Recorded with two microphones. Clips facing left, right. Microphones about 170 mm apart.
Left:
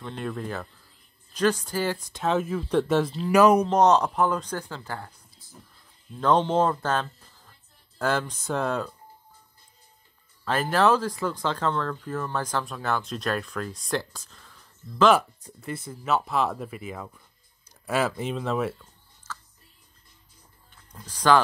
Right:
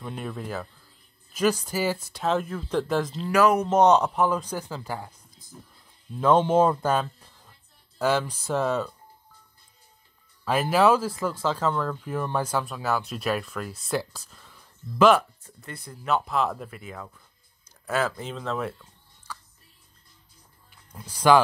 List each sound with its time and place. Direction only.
0.0 s speech: 5° right (ahead or behind)
3.3 s speech: 20° left (ahead or behind)
3.6 s speech: 5° right (ahead or behind)
10.4 s speech: 10° right (ahead or behind)
15.1 s speech: 5° left (ahead or behind)
20.7 s speech: 10° right (ahead or behind)